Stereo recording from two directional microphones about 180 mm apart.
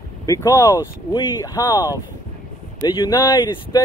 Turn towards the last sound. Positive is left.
turn(degrees=20)  # may be behind; listen again after turning